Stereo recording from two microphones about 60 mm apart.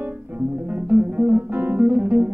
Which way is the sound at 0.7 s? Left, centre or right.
Right.